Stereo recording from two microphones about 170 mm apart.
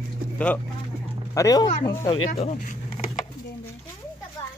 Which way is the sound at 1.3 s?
20° left (ahead or behind).